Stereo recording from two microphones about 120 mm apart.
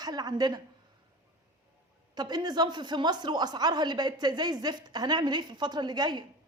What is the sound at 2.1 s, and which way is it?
Speech, 35° right (ahead or behind).